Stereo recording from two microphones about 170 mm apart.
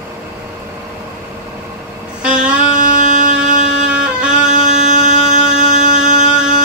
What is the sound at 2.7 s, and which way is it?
Music, 50° right (ahead or behind).